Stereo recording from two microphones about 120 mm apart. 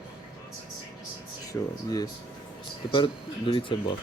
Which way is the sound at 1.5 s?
15° left (ahead or behind).